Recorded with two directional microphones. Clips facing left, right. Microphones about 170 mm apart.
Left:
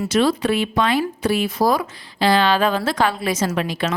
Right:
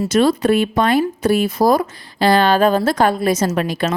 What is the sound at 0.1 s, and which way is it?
Speech, 45° right (ahead or behind).